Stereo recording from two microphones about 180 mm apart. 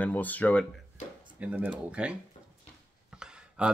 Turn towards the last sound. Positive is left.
turn(degrees=-5)  # may be behind; listen again after turning